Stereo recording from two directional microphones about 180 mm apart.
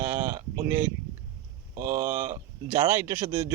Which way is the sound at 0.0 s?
15° right (ahead or behind).